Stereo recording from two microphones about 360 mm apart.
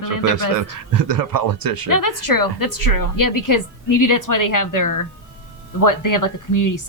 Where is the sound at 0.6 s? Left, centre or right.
Right.